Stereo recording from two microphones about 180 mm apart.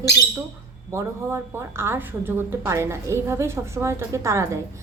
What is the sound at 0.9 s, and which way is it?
A woman's voice, 15° right (ahead or behind).